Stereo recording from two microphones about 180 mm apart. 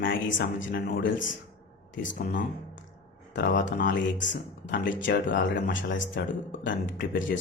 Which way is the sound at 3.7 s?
50° left (ahead or behind).